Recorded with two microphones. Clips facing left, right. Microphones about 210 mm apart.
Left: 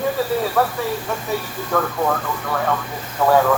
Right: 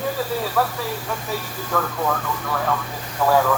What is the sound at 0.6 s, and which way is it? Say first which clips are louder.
Speech: left 2 dB; 45° left (ahead or behind).